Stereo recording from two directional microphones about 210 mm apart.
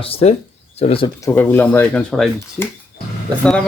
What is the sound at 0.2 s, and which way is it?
Speech, 30° left (ahead or behind).